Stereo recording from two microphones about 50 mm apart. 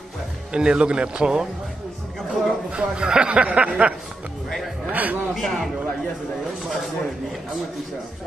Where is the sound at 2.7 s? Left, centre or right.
Centre; by 5.2 s right.